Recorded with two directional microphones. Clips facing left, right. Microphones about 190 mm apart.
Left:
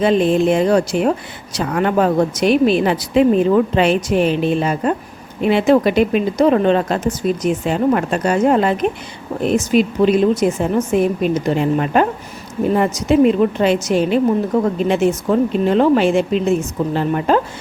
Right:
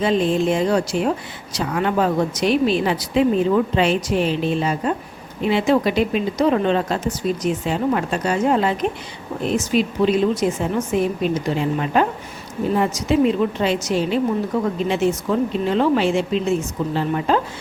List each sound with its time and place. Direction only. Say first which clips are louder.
0.0 s speech: left 4 dB; 60° left (ahead or behind)